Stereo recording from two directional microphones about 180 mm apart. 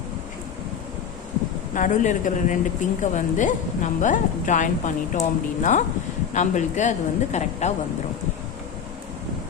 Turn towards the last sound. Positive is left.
turn(degrees=40)  # may be behind; listen again after turning